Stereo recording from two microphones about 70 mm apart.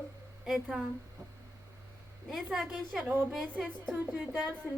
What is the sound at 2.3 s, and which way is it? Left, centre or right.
A woman's voice, centre.